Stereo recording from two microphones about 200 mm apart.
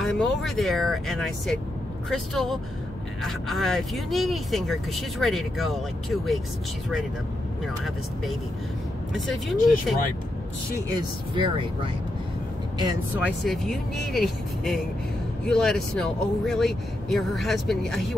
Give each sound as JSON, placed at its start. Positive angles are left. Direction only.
{"t": 0.0, "sound": "speech", "side_deg": 0}
{"t": 7.6, "sound": "speech", "side_deg": 0}
{"t": 11.0, "sound": "speech", "side_deg": -25}
{"t": 13.1, "sound": "speech", "side_deg": -5}